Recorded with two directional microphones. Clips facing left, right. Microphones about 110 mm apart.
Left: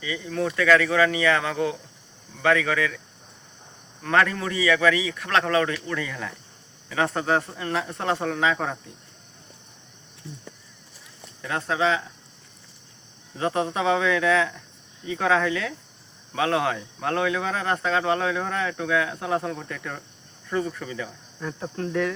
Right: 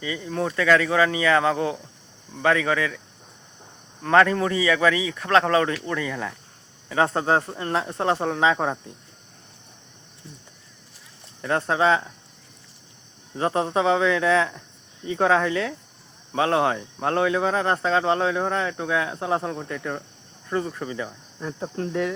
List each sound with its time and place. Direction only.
0.0 s speech: 30° right (ahead or behind)
4.0 s speech: 25° right (ahead or behind)
11.4 s speech: 35° right (ahead or behind)
13.3 s speech: 30° right (ahead or behind)